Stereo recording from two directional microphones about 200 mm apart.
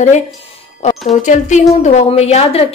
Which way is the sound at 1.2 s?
35° left (ahead or behind).